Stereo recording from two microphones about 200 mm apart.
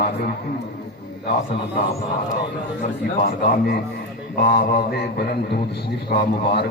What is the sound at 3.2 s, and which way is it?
A man's voice, 50° left (ahead or behind).